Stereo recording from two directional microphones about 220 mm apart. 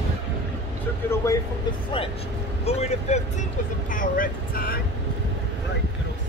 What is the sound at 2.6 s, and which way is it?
Speech, 30° left (ahead or behind).